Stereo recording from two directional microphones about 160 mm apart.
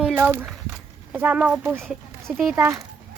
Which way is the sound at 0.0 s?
10° right (ahead or behind).